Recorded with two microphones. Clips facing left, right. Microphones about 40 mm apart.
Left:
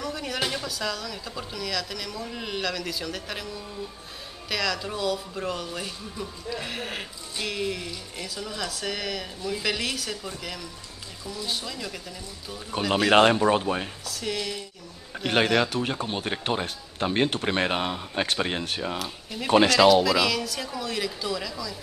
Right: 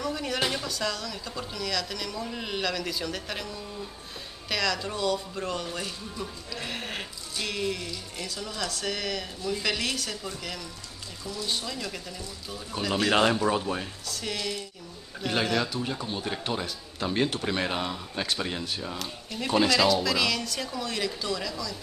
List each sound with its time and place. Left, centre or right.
0.0 s speech: centre
12.8 s speech: centre
13.1 s speech: left
14.0 s speech: centre
15.5 s speech: left
18.9 s speech: centre
19.5 s speech: left
19.9 s speech: centre